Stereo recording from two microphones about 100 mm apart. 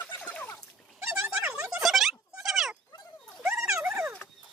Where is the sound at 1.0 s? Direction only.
25° right (ahead or behind).